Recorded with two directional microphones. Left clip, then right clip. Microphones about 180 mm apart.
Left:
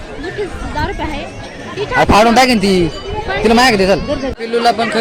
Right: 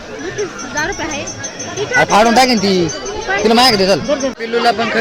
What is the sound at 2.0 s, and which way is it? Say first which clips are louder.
Speech: left 1 dB; 15° left (ahead or behind).